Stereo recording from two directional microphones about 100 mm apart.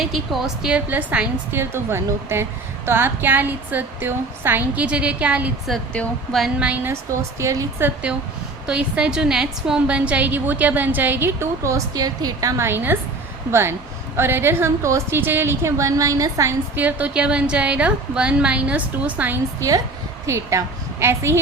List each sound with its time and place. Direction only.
0.0 s a woman's voice: centre (ahead or behind)
6.6 s a woman's voice: 15° right (ahead or behind)
7.1 s a woman's voice: 30° right (ahead or behind)
8.6 s a woman's voice: 10° right (ahead or behind); by 16.6 s 35° right (ahead or behind)
16.7 s a woman's voice: 15° right (ahead or behind)
19.5 s a woman's voice: 35° right (ahead or behind)